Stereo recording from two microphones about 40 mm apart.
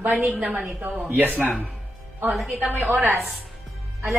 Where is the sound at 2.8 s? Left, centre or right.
Right.